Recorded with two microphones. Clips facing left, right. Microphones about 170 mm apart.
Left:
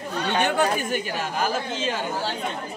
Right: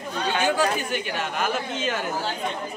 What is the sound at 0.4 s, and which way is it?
Speech, 60° left (ahead or behind).